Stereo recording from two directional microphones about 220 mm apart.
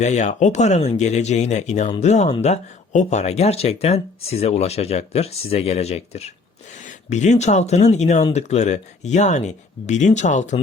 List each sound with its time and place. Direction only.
0.0 s speech: 30° left (ahead or behind)